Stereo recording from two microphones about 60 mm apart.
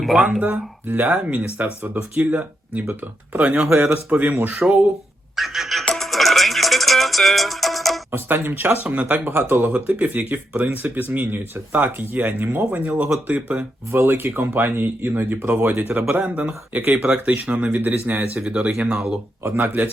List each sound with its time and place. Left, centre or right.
0.0 s speech: centre
0.3 s speech: centre
0.9 s speech: right
5.4 s a sound: centre
5.9 s music: centre
8.1 s speech: right
13.9 s speech: right